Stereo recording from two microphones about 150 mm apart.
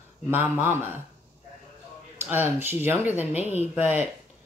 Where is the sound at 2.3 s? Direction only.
15° right (ahead or behind).